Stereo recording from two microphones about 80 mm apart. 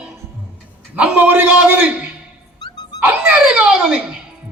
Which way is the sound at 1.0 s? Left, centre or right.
Right.